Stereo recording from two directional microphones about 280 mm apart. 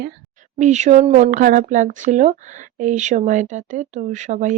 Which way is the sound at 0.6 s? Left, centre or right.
Right.